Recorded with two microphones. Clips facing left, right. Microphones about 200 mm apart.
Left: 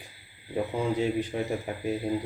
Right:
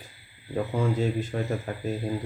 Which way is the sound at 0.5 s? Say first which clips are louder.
Right 1 dB; 15° left (ahead or behind).